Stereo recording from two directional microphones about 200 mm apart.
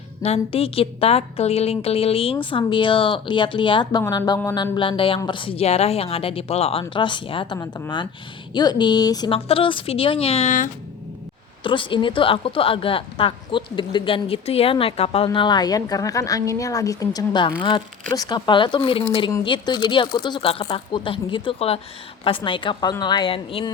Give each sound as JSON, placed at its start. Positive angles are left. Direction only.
{"t": 0.2, "sound": "a woman's voice", "side_deg": 30}
{"t": 11.6, "sound": "a woman's voice", "side_deg": 25}